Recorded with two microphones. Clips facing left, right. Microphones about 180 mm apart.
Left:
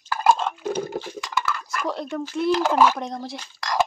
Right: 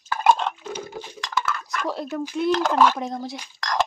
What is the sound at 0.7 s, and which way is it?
Chink, 60° left (ahead or behind).